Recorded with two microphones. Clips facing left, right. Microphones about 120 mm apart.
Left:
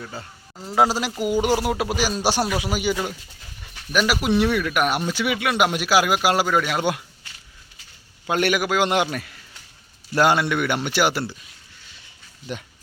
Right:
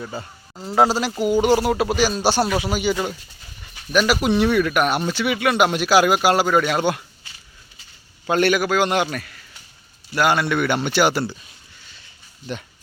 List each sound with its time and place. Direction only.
0.0 s speech: 5° right (ahead or behind)
8.3 s speech: 10° left (ahead or behind)